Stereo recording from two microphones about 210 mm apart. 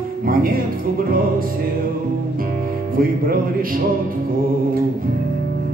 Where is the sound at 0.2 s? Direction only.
45° right (ahead or behind).